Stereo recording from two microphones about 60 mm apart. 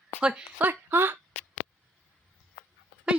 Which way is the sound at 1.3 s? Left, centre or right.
Left.